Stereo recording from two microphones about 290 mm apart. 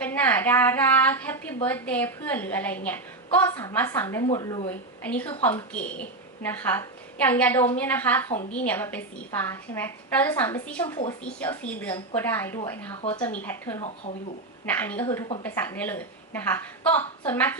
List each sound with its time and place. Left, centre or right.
0.0 s a woman's voice: centre
13.0 s speech: centre
13.4 s a woman's voice: centre